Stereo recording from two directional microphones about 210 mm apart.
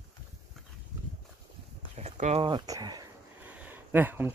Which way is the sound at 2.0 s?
30° right (ahead or behind).